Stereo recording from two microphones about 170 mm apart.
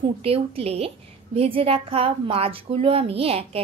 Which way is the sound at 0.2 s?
35° right (ahead or behind).